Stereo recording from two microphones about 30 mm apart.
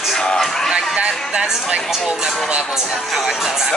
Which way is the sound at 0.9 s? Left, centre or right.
Right.